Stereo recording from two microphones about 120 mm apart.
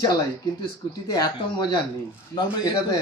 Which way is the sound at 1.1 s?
35° left (ahead or behind).